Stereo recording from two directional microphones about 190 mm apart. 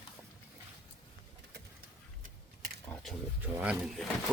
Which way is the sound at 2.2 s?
55° right (ahead or behind).